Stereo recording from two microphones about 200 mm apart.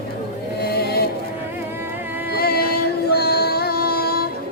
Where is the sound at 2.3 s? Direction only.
50° left (ahead or behind).